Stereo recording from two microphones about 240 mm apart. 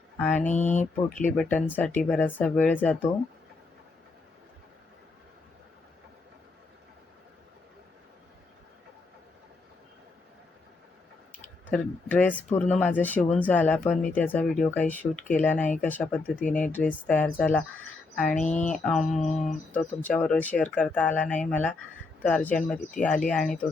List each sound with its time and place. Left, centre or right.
0.2 s speech: centre
0.4 s speech: left
1.4 s speech: centre
11.7 s speech: centre